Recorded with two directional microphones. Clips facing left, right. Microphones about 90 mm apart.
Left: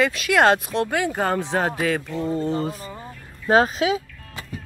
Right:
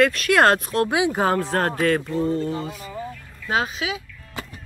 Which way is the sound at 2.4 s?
35° left (ahead or behind).